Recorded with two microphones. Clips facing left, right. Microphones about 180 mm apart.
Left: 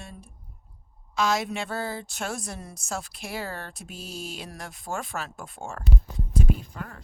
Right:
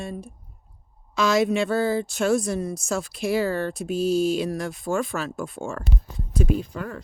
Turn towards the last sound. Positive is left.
turn(degrees=-90)